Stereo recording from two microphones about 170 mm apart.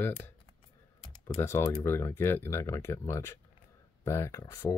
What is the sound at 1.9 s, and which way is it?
Speech, 15° left (ahead or behind).